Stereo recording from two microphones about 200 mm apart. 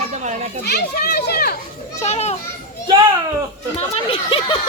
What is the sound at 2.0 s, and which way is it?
Speech, 35° left (ahead or behind).